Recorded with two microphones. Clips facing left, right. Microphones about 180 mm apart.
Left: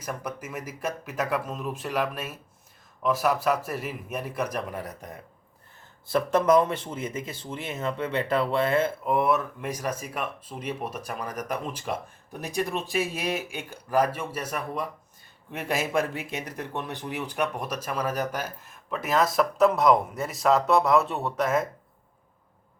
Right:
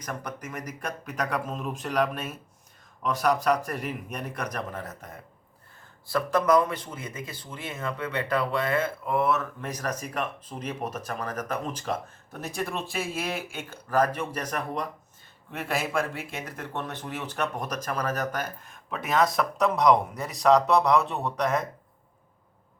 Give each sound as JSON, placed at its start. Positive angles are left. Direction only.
{"t": 0.0, "sound": "speech", "side_deg": 5}
{"t": 6.1, "sound": "speech", "side_deg": 25}